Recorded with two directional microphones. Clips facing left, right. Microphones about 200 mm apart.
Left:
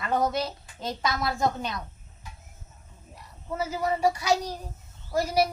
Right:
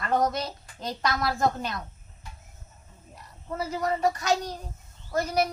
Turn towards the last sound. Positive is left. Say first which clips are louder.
# left 1 dB
turn(degrees=10)  # may be behind; listen again after turning